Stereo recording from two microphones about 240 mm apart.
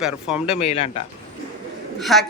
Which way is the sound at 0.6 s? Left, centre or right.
Left.